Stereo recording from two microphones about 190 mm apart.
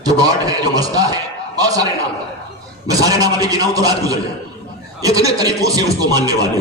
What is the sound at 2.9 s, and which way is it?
A man's voice, 20° right (ahead or behind).